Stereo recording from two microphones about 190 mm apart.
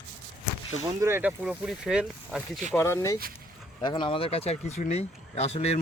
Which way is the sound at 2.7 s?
15° left (ahead or behind).